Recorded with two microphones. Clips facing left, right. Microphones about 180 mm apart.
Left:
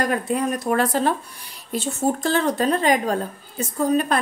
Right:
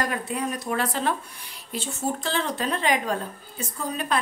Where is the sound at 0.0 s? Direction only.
45° left (ahead or behind).